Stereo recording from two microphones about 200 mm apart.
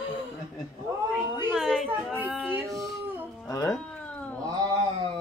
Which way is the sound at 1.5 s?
Centre (ahead or behind).